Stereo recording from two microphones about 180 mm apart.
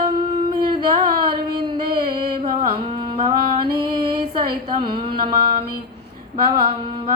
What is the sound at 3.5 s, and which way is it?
Music, 25° right (ahead or behind).